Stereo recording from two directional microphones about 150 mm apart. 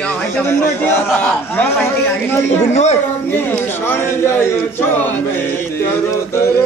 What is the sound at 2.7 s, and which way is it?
Speech, 50° left (ahead or behind).